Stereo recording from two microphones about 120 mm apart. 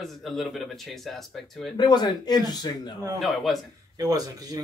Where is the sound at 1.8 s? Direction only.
35° left (ahead or behind).